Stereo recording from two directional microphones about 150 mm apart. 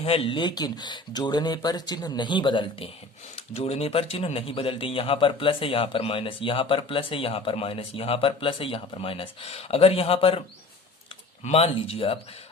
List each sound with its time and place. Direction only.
0.0 s speech: 40° left (ahead or behind)
11.4 s speech: 40° left (ahead or behind)